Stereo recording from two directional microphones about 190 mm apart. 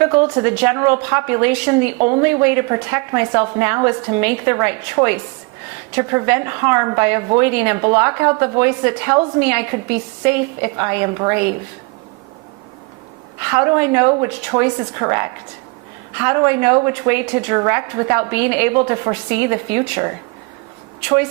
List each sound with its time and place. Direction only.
0.0 s a woman's voice: 15° right (ahead or behind)
13.5 s a woman's voice: 15° right (ahead or behind)